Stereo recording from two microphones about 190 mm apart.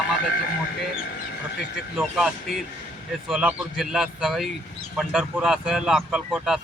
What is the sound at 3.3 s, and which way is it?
Speech, centre (ahead or behind).